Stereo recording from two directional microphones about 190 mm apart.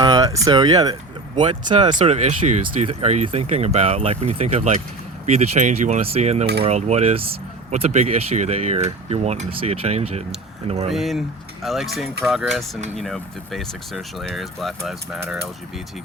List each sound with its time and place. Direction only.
0.0 s speech: 20° right (ahead or behind)
2.1 s speech: 35° right (ahead or behind)
6.4 s cutlery: 55° right (ahead or behind)
6.7 s speech: 35° right (ahead or behind)
10.9 s speech: centre (ahead or behind)